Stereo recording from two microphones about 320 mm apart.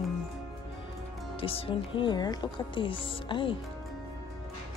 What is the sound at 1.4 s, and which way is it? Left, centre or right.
Speech, centre.